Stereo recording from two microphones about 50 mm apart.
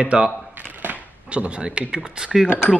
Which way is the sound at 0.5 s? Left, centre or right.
Right.